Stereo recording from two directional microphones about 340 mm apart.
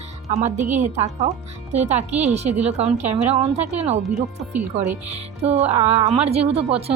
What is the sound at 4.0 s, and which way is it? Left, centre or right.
Speech, centre.